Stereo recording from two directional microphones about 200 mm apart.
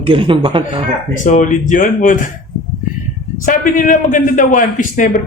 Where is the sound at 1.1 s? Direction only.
40° left (ahead or behind).